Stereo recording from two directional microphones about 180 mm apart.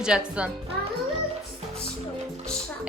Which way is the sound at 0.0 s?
5° right (ahead or behind).